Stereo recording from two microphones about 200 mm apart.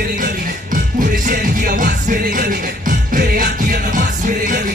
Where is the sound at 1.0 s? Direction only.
40° right (ahead or behind).